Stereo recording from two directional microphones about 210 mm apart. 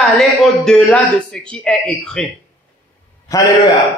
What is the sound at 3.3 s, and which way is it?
Speech, 15° left (ahead or behind).